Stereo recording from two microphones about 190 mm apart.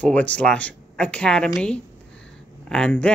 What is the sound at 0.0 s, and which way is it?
Speech, 5° left (ahead or behind).